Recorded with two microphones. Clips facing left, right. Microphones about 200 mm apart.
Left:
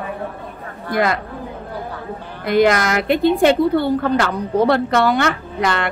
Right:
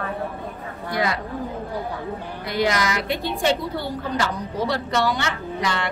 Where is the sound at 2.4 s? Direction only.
55° left (ahead or behind).